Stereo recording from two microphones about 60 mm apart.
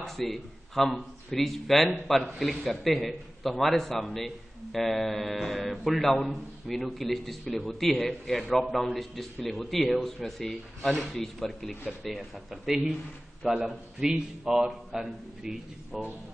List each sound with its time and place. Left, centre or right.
0.0 s a man's voice: centre